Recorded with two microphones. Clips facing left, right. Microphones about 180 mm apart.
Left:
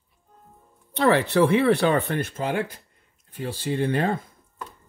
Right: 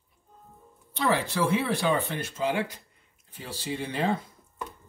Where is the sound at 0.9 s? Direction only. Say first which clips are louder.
Left 7 dB; 65° left (ahead or behind).